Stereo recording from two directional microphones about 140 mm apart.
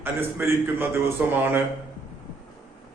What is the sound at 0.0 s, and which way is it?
Speech, 15° right (ahead or behind).